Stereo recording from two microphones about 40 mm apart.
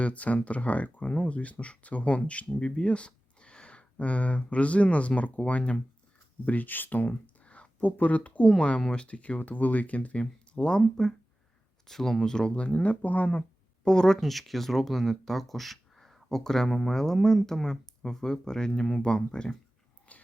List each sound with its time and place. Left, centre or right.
0.0 s speech: left
6.4 s speech: left
7.9 s speech: left
8.4 s speech: left
11.9 s speech: centre; by 13.4 s left
13.8 s speech: centre
14.2 s speech: centre
19.0 s speech: left
20.1 s a sound: left